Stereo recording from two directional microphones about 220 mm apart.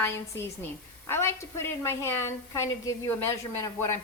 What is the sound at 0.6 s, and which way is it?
A woman's voice, 10° left (ahead or behind).